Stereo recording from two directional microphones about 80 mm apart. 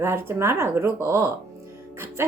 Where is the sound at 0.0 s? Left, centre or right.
Right.